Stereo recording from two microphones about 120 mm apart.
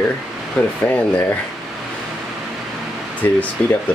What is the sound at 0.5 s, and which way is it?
Speech, 15° left (ahead or behind).